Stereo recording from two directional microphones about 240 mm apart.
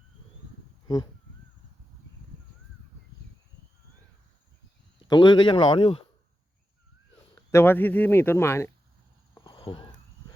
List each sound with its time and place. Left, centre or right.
0.9 s speech: centre
4.9 s speech: centre
7.5 s speech: centre
9.3 s a sound: centre